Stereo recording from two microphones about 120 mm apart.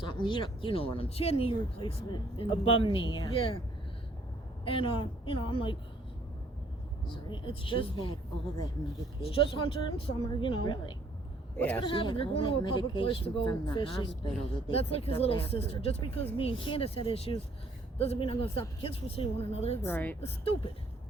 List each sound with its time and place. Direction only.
0.0 s speech: 40° left (ahead or behind)
4.6 s speech: 50° left (ahead or behind)
7.3 s speech: 45° left (ahead or behind)
9.2 s a woman's voice: 45° left (ahead or behind)
11.5 s a woman's voice: 15° left (ahead or behind)
11.8 s a woman's voice: 45° left (ahead or behind)
14.7 s speech: 55° left (ahead or behind)
19.8 s a woman's voice: 15° left (ahead or behind)
20.2 s speech: 55° left (ahead or behind)